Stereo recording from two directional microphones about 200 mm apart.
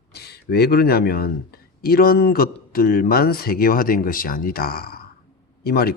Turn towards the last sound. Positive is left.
turn(degrees=50)  # may be behind; listen again after turning